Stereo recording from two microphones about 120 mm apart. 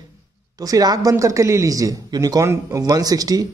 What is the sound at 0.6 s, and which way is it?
Speech, 30° right (ahead or behind).